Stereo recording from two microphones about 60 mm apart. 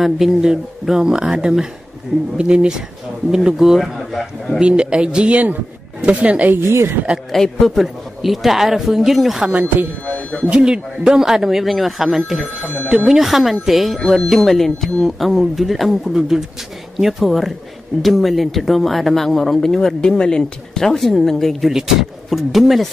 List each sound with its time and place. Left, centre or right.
0.0 s speech: centre
3.8 s speech: centre
4.6 s speech: centre
7.3 s speech: centre
9.4 s speech: right
10.0 s speech: left
10.5 s speech: centre